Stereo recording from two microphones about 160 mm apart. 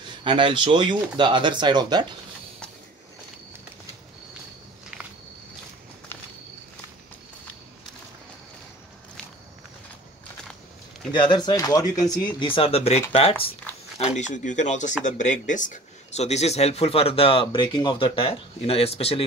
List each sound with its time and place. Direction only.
0.0 s speech: 30° right (ahead or behind)
11.1 s speech: 30° left (ahead or behind)
11.8 s speech: 55° left (ahead or behind)
12.2 s speech: 30° left (ahead or behind)